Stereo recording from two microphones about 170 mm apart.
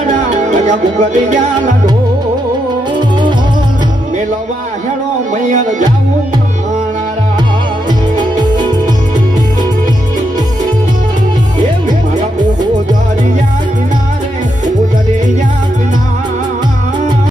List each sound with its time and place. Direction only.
0.1 s music: 45° right (ahead or behind)
5.3 s music: 45° right (ahead or behind)
8.1 s music: 25° right (ahead or behind)